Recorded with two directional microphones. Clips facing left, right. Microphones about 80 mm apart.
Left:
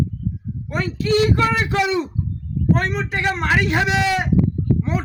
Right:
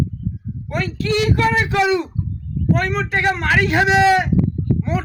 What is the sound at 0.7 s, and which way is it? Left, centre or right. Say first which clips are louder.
Speech: even; centre.